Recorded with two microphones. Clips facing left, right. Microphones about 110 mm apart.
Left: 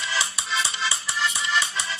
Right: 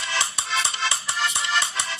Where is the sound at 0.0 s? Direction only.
45° right (ahead or behind).